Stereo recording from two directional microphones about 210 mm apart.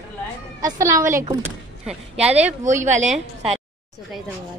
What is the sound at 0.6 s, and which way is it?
Speech, 15° right (ahead or behind).